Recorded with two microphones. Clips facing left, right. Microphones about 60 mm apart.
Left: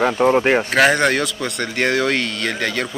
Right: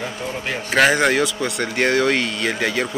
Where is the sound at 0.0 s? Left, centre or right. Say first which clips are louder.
Left 12 dB; left.